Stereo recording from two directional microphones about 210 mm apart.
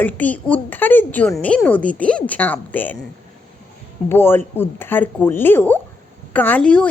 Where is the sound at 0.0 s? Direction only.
5° left (ahead or behind).